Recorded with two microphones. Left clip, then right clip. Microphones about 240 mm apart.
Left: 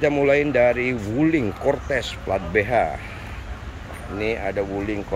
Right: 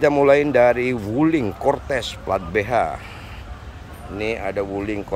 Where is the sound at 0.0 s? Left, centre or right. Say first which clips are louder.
Right 3 dB; centre.